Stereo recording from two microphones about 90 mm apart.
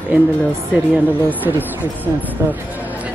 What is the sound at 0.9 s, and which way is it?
Speech, 20° right (ahead or behind).